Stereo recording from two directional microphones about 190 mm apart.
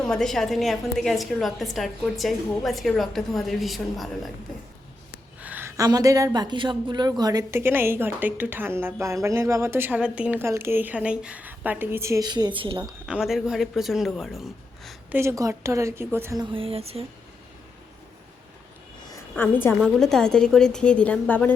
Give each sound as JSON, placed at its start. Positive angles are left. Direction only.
{"t": 0.0, "sound": "a woman's voice", "side_deg": 5}
{"t": 5.4, "sound": "speech", "side_deg": -10}
{"t": 13.1, "sound": "speech", "side_deg": -5}
{"t": 15.2, "sound": "speech", "side_deg": -15}
{"t": 16.4, "sound": "speech", "side_deg": -25}
{"t": 19.4, "sound": "a woman's voice", "side_deg": 10}